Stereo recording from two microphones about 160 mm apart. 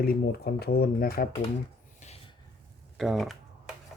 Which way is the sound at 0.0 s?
75° left (ahead or behind).